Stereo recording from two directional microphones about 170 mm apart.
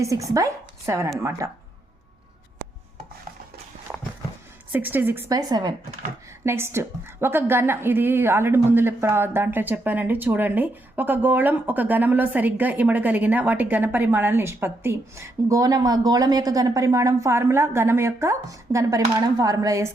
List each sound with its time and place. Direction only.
0.0 s a woman's voice: 20° right (ahead or behind)
4.7 s a woman's voice: 10° right (ahead or behind)
5.3 s a woman's voice: 20° right (ahead or behind)